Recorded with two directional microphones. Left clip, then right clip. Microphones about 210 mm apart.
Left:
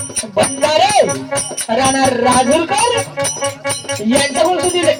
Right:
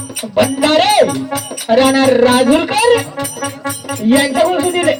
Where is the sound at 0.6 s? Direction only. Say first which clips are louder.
Right 1 dB; 20° left (ahead or behind).